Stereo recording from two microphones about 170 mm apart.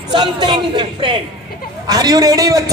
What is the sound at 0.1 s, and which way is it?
A man's voice, 25° right (ahead or behind).